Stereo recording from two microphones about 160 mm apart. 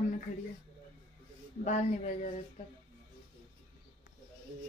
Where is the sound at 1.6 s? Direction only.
50° left (ahead or behind).